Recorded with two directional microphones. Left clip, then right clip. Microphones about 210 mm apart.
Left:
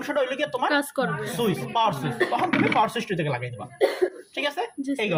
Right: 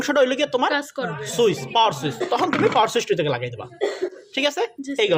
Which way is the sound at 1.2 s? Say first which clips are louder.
Right 6 dB; 40° right (ahead or behind).